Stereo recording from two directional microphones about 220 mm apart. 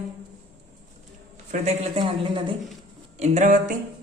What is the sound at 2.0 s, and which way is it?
Speech, 20° right (ahead or behind).